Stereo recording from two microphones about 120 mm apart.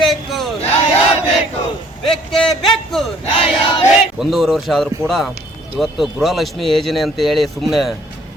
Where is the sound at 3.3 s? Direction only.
55° left (ahead or behind).